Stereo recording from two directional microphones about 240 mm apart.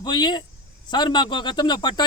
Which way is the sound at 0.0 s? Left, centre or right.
Centre.